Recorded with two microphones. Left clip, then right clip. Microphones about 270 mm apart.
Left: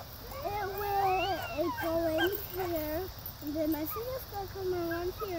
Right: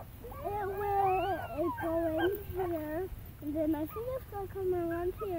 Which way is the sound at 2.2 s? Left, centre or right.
Centre.